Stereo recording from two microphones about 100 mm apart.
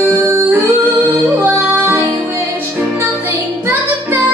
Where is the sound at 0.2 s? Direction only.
20° right (ahead or behind).